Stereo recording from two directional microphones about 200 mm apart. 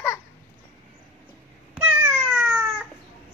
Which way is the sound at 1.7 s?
10° right (ahead or behind).